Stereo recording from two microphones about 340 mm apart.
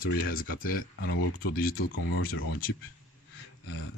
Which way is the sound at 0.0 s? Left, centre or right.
Left.